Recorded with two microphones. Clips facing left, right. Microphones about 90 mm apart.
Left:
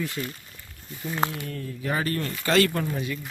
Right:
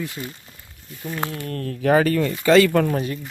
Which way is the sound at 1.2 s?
20° left (ahead or behind).